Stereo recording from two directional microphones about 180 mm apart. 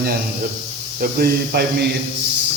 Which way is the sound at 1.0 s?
55° right (ahead or behind).